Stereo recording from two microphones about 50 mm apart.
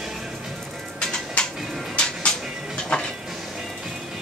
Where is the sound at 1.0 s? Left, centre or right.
Centre.